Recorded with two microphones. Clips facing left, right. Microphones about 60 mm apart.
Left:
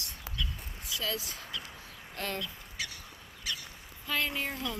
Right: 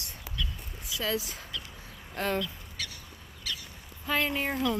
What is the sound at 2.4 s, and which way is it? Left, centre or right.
Bird, centre.